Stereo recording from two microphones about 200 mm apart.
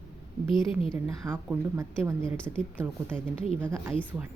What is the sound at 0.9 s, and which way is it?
A woman's voice, 10° right (ahead or behind).